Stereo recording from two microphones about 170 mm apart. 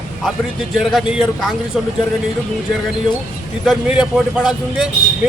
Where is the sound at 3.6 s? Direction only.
Centre (ahead or behind).